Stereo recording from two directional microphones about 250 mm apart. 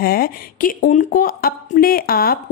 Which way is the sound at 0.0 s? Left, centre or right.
Left.